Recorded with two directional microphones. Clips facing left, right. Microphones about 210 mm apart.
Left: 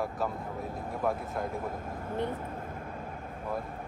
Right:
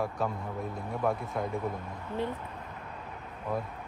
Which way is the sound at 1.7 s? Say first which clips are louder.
Left 1 dB; 45° left (ahead or behind).